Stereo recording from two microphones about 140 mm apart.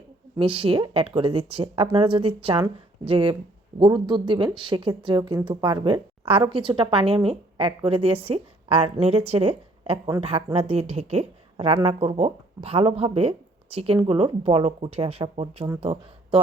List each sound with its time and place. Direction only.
0.3 s speech: 40° right (ahead or behind)